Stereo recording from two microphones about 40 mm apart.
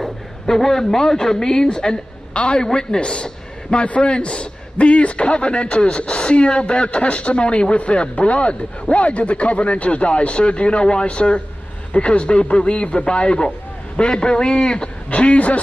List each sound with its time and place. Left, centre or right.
0.0 s a sound: centre
0.8 s a man's voice: centre
15.0 s speech: left